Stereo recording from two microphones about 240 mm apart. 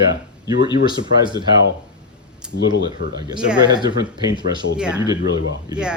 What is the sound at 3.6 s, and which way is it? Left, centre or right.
Speech, centre.